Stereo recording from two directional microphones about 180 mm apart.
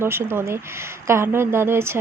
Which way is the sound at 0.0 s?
15° right (ahead or behind).